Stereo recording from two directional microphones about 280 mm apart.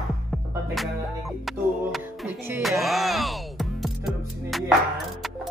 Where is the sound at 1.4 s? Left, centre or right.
Centre.